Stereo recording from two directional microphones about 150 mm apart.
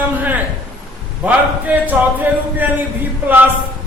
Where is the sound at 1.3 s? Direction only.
10° right (ahead or behind).